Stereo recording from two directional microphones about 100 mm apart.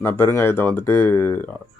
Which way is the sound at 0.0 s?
20° left (ahead or behind).